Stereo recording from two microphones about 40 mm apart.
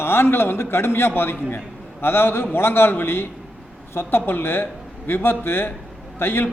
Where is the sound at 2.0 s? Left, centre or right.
Left.